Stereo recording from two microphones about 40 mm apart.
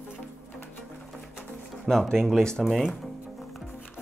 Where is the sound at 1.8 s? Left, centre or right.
Centre.